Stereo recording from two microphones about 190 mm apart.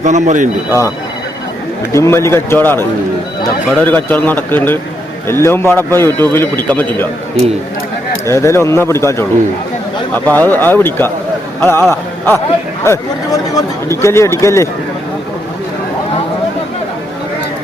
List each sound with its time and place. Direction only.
0.0 s speech: 40° right (ahead or behind)
0.7 s a man's voice: 15° left (ahead or behind)
8.3 s a man's voice: 15° left (ahead or behind)
10.2 s a man's voice: 10° left (ahead or behind)